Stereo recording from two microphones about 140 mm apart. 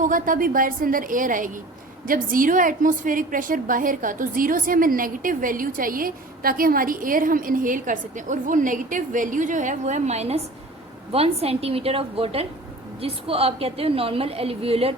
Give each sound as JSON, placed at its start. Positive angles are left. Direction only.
{"t": 0.0, "sound": "a woman's voice", "side_deg": -75}